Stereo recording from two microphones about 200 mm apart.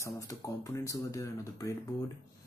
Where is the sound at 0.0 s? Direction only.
15° left (ahead or behind).